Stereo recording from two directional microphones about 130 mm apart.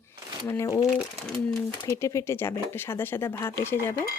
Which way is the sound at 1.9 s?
20° left (ahead or behind).